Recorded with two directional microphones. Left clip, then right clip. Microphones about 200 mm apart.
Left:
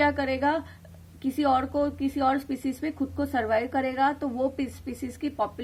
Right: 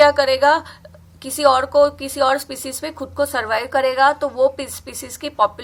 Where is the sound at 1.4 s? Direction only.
30° left (ahead or behind).